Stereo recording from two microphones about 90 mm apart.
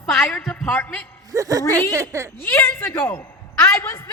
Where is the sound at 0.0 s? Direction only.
5° left (ahead or behind).